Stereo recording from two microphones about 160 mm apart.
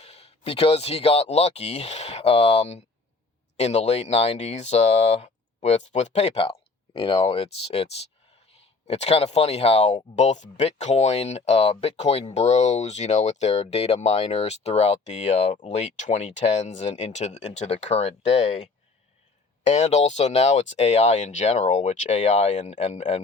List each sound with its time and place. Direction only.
0.0 s speech: 40° left (ahead or behind)
8.9 s speech: 40° left (ahead or behind)